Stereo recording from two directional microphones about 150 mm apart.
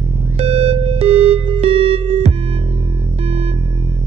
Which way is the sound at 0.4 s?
45° right (ahead or behind).